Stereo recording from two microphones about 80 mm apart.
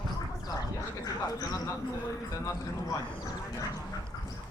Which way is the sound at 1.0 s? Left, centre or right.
Left.